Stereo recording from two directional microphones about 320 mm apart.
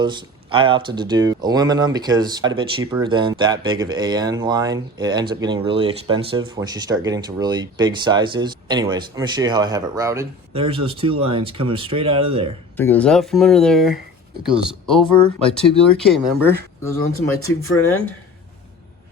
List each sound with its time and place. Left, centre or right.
0.0 s speech: centre
12.7 s speech: centre
17.4 s speech: left